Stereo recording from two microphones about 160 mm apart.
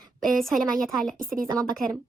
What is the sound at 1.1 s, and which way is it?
Speech, 60° right (ahead or behind).